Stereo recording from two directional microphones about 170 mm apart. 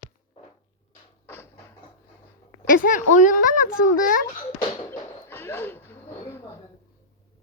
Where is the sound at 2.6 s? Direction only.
55° left (ahead or behind).